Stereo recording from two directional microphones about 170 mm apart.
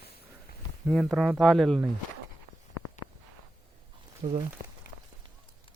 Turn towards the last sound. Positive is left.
turn(degrees=-35)  # may be behind; listen again after turning